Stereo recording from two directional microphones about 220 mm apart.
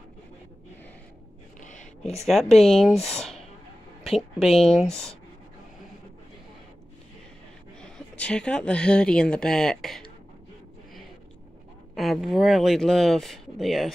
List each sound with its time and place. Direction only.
1.6 s whispering: 35° left (ahead or behind)
2.6 s speech: centre (ahead or behind)
4.4 s speech: centre (ahead or behind)
7.8 s speech: 5° left (ahead or behind)
11.9 s speech: centre (ahead or behind)